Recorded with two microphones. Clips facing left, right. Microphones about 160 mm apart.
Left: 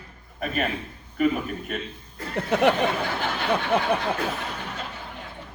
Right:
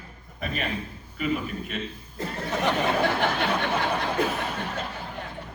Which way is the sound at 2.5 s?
60° left (ahead or behind).